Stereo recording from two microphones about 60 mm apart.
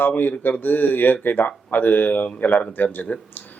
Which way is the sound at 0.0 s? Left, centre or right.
Left.